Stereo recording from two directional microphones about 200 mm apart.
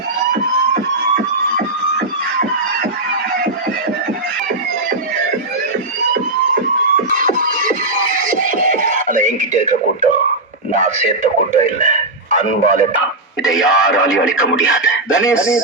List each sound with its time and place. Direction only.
7.1 s music: 40° right (ahead or behind)
10.7 s speech: 40° right (ahead or behind)
13.4 s speech: 5° right (ahead or behind)